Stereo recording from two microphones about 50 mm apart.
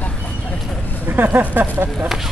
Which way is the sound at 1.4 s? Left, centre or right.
Right.